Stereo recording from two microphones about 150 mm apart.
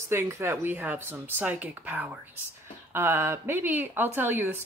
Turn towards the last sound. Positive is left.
turn(degrees=-15)  # may be behind; listen again after turning